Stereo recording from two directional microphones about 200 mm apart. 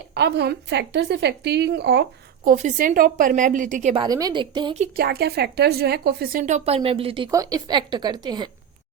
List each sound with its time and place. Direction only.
0.1 s a woman's voice: 55° right (ahead or behind); by 3.9 s 40° right (ahead or behind)
3.9 s a woman's voice: 20° right (ahead or behind)
4.8 s a woman's voice: 50° right (ahead or behind)
6.4 s a woman's voice: 30° right (ahead or behind)